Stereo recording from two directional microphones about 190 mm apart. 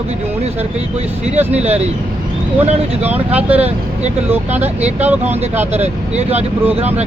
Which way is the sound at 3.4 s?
10° right (ahead or behind).